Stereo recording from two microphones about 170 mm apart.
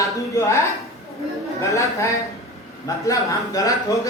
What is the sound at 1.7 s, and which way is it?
A man's voice, 15° left (ahead or behind).